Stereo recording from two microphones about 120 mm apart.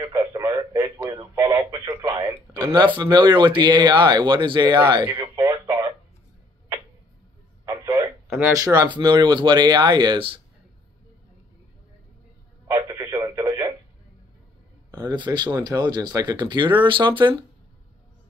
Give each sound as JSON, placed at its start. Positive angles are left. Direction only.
{"t": 0.0, "sound": "radio", "side_deg": -30}
{"t": 2.0, "sound": "speech", "side_deg": -35}
{"t": 5.0, "sound": "radio", "side_deg": -20}
{"t": 7.6, "sound": "a sound", "side_deg": -25}
{"t": 8.5, "sound": "speech", "side_deg": -30}
{"t": 12.7, "sound": "telephone", "side_deg": -30}
{"t": 15.0, "sound": "speech", "side_deg": -40}